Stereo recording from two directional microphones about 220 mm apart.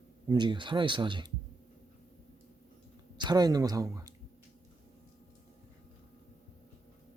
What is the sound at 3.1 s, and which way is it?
Speech, 20° right (ahead or behind).